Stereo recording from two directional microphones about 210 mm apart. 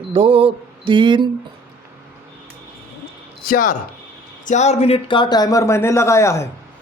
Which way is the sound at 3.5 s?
40° left (ahead or behind).